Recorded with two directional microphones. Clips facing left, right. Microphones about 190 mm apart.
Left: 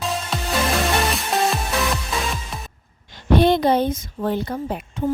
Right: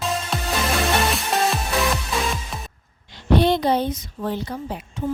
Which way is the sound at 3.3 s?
50° left (ahead or behind).